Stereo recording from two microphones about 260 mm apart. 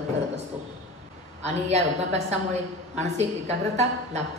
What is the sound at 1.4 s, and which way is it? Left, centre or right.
Speech, right.